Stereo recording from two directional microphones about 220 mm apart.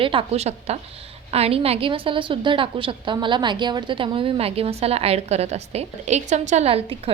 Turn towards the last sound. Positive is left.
turn(degrees=-30)  # may be behind; listen again after turning